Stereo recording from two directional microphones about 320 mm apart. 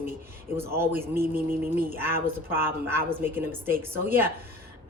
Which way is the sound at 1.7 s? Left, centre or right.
Centre.